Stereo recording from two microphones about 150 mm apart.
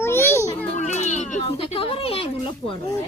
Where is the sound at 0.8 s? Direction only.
50° left (ahead or behind).